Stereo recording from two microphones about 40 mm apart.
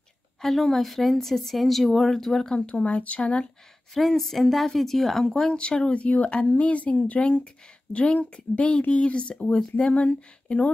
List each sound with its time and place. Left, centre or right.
0.4 s speech: centre
2.5 s speech: left
4.1 s speech: centre
5.2 s speech: centre